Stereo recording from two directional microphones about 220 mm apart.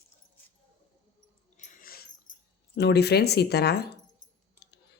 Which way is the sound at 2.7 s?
50° left (ahead or behind).